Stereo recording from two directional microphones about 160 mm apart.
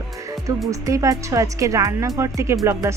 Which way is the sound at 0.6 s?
20° right (ahead or behind).